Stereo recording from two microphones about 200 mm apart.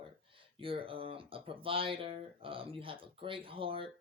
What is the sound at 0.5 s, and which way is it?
Speech, 25° right (ahead or behind).